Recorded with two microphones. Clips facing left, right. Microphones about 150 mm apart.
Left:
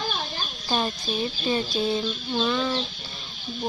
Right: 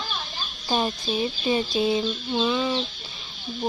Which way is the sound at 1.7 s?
10° right (ahead or behind).